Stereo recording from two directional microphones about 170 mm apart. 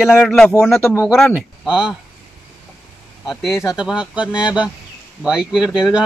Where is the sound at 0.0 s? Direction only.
5° left (ahead or behind).